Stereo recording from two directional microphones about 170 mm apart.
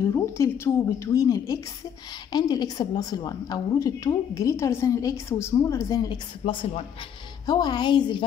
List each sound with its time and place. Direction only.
0.0 s a woman's voice: 15° left (ahead or behind)